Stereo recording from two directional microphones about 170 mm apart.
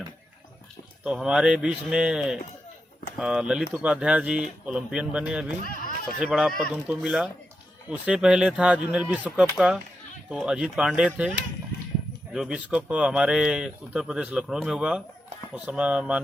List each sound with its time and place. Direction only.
1.0 s speech: 5° right (ahead or behind)
5.6 s speech: 55° left (ahead or behind)
6.1 s speech: 5° right (ahead or behind)
12.3 s speech: 5° right (ahead or behind)